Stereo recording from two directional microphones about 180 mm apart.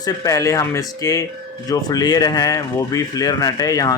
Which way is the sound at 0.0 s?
20° left (ahead or behind).